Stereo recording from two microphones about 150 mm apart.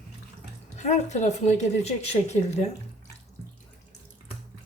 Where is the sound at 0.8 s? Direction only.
50° left (ahead or behind).